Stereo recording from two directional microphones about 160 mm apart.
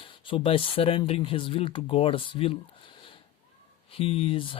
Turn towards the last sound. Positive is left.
turn(degrees=35)  # may be behind; listen again after turning